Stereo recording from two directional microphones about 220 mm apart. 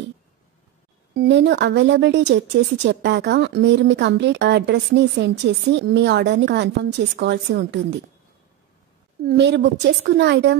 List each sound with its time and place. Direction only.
1.1 s a woman's voice: 50° right (ahead or behind)
9.2 s a woman's voice: 45° right (ahead or behind)